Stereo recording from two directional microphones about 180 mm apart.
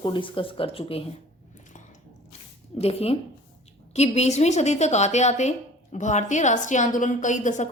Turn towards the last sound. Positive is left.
turn(degrees=40)  # may be behind; listen again after turning